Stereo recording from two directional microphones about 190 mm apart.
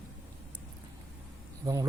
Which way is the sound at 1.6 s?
20° right (ahead or behind).